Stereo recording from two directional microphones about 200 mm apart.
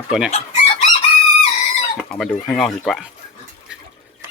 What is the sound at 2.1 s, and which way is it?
Speech, 5° left (ahead or behind).